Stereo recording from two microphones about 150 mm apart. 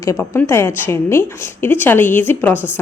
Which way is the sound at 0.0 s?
15° left (ahead or behind).